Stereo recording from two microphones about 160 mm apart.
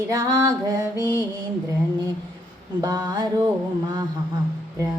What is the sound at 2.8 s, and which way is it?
Female singing, 25° right (ahead or behind).